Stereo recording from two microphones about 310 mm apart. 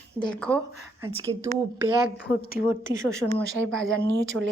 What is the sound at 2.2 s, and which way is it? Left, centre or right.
Speech, left.